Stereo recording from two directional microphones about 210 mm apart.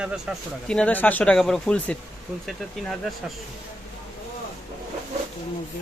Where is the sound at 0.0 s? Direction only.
5° right (ahead or behind).